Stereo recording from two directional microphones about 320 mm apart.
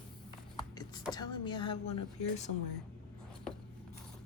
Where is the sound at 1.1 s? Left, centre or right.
Centre.